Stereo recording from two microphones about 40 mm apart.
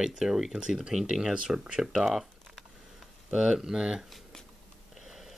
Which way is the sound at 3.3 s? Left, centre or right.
Centre.